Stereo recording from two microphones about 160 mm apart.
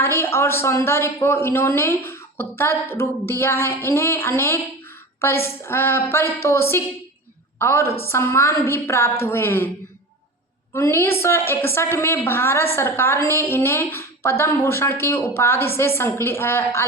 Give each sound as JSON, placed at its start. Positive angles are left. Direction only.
{"t": 0.0, "sound": "speech", "side_deg": 15}
{"t": 10.8, "sound": "speech", "side_deg": 15}